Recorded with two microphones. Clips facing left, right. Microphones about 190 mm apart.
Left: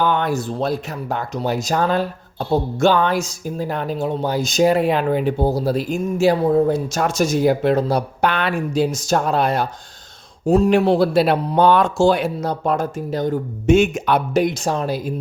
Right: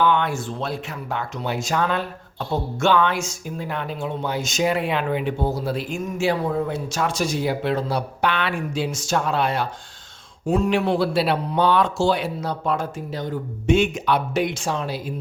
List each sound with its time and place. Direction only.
0.0 s speech: 40° left (ahead or behind)